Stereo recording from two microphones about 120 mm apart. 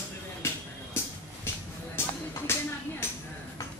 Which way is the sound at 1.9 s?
20° left (ahead or behind).